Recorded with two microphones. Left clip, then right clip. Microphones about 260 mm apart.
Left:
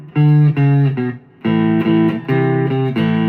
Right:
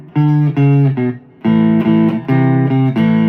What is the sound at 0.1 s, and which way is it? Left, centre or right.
Music, right.